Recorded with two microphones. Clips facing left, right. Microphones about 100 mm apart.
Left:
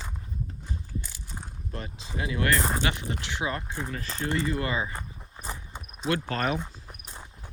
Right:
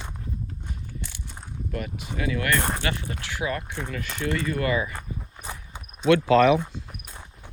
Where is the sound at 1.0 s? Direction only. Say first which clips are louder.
Right 3 dB; 10° left (ahead or behind).